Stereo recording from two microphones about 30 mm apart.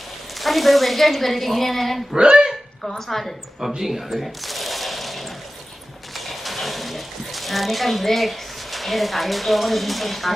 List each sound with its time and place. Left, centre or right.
0.4 s a woman's voice: centre
2.1 s speech: right
3.1 s a woman's voice: centre
3.8 s shuffling cards: centre
6.1 s a sound: centre